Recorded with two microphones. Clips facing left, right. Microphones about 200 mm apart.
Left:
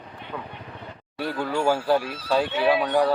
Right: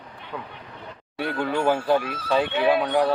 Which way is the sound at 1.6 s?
10° left (ahead or behind).